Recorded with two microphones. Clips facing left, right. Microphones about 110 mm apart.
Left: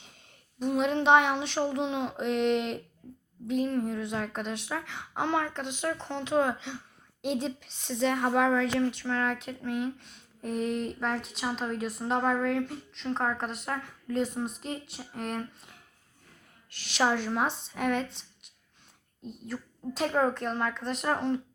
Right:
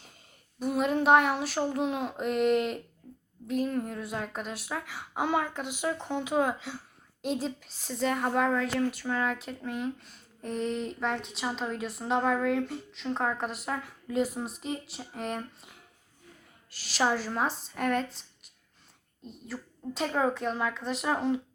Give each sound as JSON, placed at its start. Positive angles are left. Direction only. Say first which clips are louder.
{"t": 0.0, "sound": "a woman's voice", "louder": "even", "side_deg": 0}